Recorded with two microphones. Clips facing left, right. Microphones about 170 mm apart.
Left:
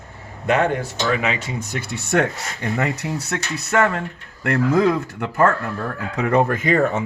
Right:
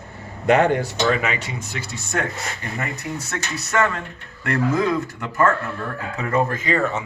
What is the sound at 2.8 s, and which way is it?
Speech, 85° left.